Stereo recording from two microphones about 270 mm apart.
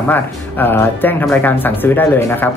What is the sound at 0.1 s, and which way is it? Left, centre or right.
Speech, centre.